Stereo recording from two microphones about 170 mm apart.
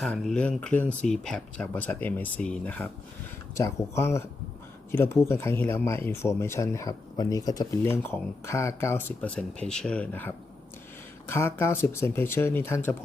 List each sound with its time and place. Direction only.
0.0 s speech: 5° left (ahead or behind)